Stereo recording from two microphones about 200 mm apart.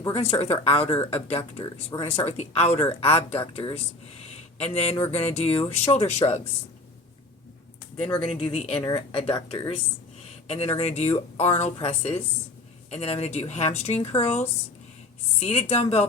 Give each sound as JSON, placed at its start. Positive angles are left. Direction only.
{"t": 0.1, "sound": "speech", "side_deg": 30}
{"t": 7.9, "sound": "speech", "side_deg": 5}
{"t": 8.2, "sound": "speech", "side_deg": 30}
{"t": 15.4, "sound": "speech", "side_deg": 35}